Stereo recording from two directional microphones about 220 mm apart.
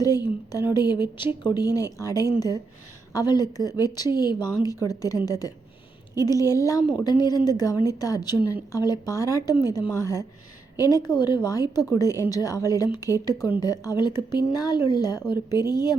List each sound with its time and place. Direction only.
0.7 s a woman's voice: 20° left (ahead or behind)